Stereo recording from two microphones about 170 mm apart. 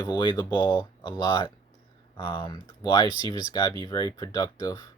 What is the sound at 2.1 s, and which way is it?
Speech, 30° left (ahead or behind).